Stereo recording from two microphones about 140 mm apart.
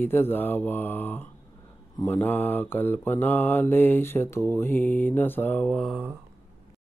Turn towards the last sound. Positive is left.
turn(degrees=10)  # may be behind; listen again after turning